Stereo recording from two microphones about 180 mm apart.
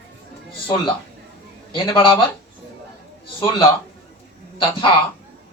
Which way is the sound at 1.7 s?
25° left (ahead or behind).